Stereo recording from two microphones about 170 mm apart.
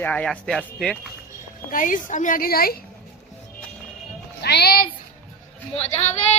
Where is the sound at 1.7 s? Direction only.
50° left (ahead or behind).